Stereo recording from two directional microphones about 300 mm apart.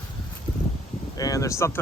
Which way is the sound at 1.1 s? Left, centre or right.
Centre.